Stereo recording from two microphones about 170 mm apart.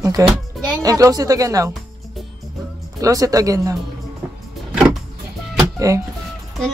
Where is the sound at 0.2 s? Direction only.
20° right (ahead or behind).